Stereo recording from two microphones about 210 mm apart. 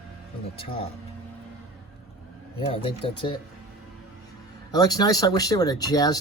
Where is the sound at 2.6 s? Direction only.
25° left (ahead or behind).